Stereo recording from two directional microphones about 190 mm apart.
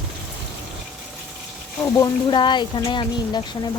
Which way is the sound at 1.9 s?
20° left (ahead or behind).